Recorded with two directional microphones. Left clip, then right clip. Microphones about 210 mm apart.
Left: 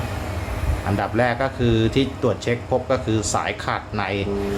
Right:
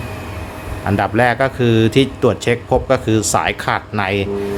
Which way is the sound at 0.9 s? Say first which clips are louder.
Right 6 dB; 35° right (ahead or behind).